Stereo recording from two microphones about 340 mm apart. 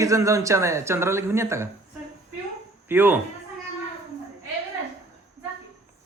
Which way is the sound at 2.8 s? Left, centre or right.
Centre.